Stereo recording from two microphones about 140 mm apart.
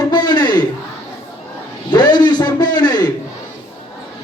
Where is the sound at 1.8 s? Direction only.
30° left (ahead or behind).